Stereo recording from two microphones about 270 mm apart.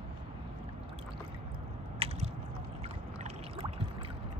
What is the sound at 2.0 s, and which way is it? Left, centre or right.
Biting, right.